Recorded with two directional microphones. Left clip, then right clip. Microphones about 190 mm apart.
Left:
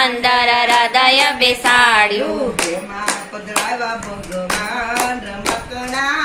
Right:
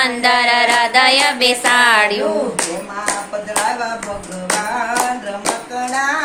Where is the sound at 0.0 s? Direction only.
15° right (ahead or behind).